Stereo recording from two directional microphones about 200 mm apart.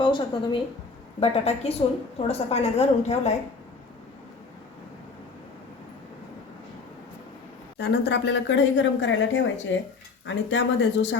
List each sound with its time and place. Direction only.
0.0 s a woman's voice: 25° left (ahead or behind)
7.8 s speech: 55° left (ahead or behind)